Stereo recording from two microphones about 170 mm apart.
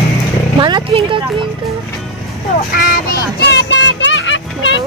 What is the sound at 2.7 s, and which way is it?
Child singing, 60° left (ahead or behind).